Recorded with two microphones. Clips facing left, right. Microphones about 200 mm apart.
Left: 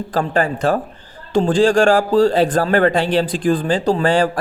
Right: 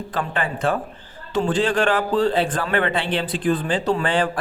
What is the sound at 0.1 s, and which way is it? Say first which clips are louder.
A man's voice: left 8 dB; 35° left (ahead or behind).